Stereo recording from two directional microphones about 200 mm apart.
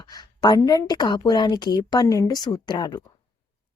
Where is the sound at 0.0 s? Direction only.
20° left (ahead or behind).